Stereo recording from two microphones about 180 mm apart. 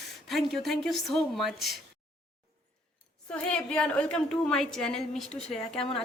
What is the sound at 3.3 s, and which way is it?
A woman's voice, 5° left (ahead or behind).